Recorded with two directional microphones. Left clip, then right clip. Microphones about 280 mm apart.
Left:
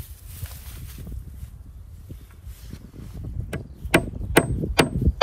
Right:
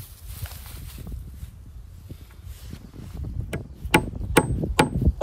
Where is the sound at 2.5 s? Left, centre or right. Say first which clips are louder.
Even; right.